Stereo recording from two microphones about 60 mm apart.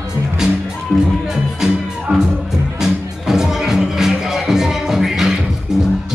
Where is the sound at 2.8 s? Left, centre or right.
Centre.